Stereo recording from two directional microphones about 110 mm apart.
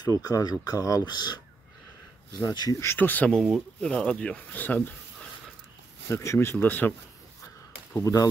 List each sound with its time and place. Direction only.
0.2 s speech: 35° left (ahead or behind)
2.4 s speech: 35° left (ahead or behind)
2.8 s speech: 20° left (ahead or behind)
6.0 s speech: 25° left (ahead or behind)
7.9 s speech: 30° left (ahead or behind)